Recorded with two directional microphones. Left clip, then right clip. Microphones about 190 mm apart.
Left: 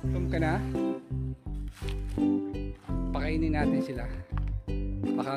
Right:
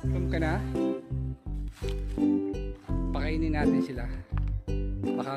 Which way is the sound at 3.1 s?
5° left (ahead or behind).